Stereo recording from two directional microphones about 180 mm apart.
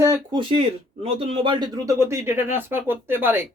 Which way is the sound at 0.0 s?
20° right (ahead or behind).